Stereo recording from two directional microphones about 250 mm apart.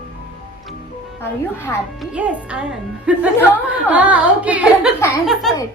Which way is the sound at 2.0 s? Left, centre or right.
Centre.